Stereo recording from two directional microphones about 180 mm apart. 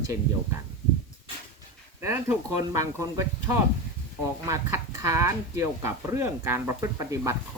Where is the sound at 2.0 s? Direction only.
15° right (ahead or behind).